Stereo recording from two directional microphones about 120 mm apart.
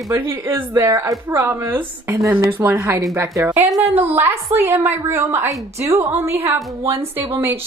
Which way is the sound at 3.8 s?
15° right (ahead or behind).